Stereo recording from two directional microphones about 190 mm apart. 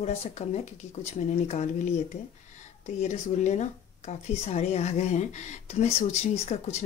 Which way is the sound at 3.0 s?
35° left (ahead or behind).